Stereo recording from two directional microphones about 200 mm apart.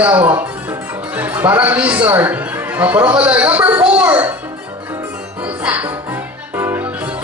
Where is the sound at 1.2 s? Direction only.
10° right (ahead or behind).